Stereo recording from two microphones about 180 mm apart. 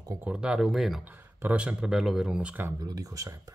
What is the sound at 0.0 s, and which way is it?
Speech, 15° right (ahead or behind).